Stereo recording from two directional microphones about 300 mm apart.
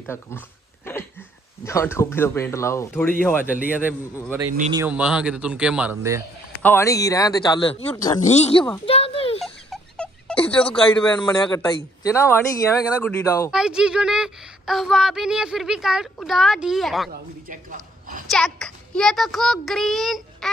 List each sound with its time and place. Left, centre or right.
0.0 s speech: centre
1.6 s speech: centre
3.6 s speech: centre
6.6 s speech: centre
8.2 s speech: left
8.8 s a sound: centre
9.4 s a sound: centre
10.5 s speech: centre
13.5 s speech: centre
17.1 s a man's voice: right
18.3 s speech: centre